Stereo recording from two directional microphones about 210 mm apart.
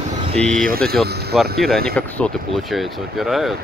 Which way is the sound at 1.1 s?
50° right (ahead or behind).